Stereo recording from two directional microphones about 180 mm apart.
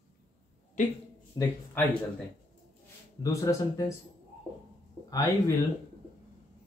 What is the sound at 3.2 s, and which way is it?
Speech, 20° left (ahead or behind).